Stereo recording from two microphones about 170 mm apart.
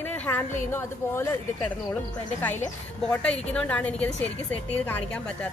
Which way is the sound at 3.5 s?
5° left (ahead or behind).